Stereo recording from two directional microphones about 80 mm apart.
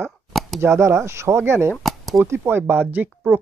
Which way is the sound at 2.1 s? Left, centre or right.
Right.